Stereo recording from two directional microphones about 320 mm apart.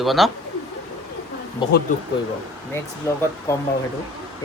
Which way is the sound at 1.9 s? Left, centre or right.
Left.